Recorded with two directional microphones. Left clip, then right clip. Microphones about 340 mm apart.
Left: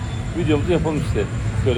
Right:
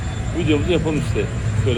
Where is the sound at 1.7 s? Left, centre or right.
Centre.